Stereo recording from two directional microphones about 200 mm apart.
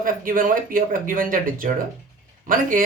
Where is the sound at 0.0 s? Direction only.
45° right (ahead or behind).